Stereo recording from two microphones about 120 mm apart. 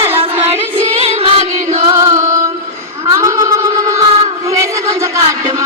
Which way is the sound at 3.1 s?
25° right (ahead or behind).